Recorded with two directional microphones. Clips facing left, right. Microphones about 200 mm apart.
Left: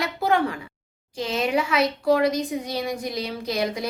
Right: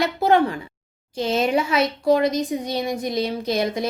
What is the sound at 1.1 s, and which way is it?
Speech, 25° right (ahead or behind).